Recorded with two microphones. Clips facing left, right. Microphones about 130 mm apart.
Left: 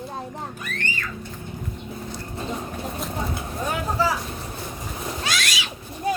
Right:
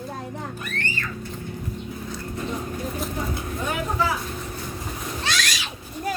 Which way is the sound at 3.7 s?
35° left (ahead or behind).